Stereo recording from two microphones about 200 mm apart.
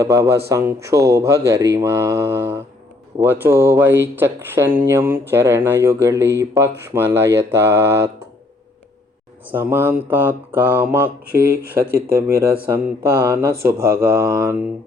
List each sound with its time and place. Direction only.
0.0 s speech: 15° right (ahead or behind)
9.5 s speech: 10° right (ahead or behind)
11.3 s speech: 50° right (ahead or behind)
12.1 s speech: 15° right (ahead or behind)
13.7 s speech: 50° right (ahead or behind)
14.0 s speech: 15° right (ahead or behind)